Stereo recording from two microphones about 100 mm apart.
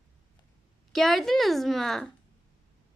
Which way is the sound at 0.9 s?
Centre (ahead or behind).